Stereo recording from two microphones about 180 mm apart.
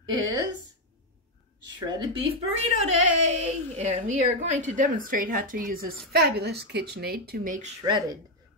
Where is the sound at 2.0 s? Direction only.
35° right (ahead or behind).